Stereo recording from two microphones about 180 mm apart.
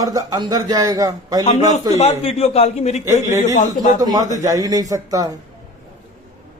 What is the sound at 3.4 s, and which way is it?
Speech, 45° left (ahead or behind).